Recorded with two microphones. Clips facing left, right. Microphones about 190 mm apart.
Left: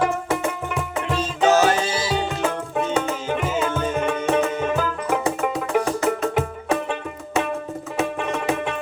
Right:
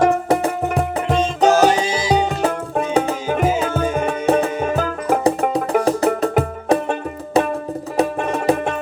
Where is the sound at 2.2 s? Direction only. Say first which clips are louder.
Right 4 dB; 40° right (ahead or behind).